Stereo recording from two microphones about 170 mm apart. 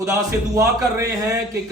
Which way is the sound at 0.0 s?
20° right (ahead or behind).